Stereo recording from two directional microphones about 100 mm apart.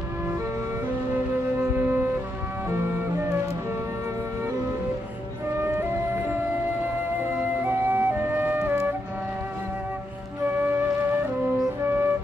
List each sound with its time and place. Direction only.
1.6 s wind instrument: 25° right (ahead or behind)
2.7 s music: 30° right (ahead or behind)
5.6 s music: 25° right (ahead or behind)
7.6 s music: 20° right (ahead or behind)
10.4 s flute: 20° right (ahead or behind)
11.8 s music: 25° right (ahead or behind)